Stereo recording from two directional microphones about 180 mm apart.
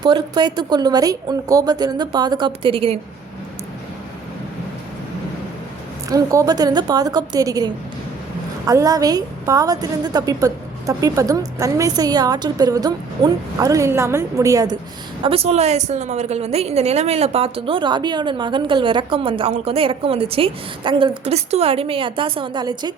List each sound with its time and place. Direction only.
0.0 s a woman's voice: 25° right (ahead or behind)
6.1 s a woman's voice: 20° right (ahead or behind)
15.2 s a woman's voice: 30° right (ahead or behind)